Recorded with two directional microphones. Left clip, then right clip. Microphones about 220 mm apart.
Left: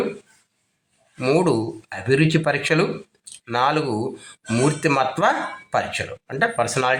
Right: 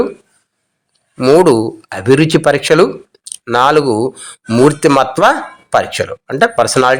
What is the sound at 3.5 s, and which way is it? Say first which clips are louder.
Speech: right 10 dB; 45° right (ahead or behind).